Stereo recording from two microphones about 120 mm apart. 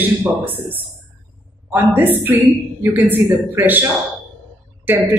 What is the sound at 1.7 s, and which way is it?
A woman's voice, 15° right (ahead or behind).